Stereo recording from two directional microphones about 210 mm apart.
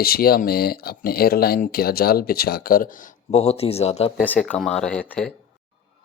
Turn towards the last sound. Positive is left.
turn(degrees=5)  # may be behind; listen again after turning